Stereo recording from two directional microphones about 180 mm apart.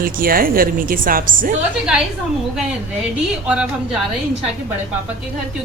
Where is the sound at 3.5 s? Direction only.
5° right (ahead or behind).